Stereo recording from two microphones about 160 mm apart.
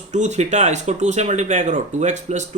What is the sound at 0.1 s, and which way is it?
Speech, 45° right (ahead or behind).